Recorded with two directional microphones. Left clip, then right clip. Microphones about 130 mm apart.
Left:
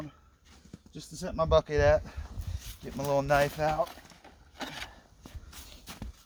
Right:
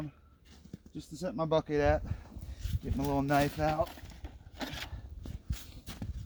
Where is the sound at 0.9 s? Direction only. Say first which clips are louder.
Left 3 dB; 35° left (ahead or behind).